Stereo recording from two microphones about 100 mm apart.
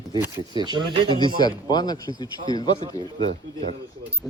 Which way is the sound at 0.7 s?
50° right (ahead or behind).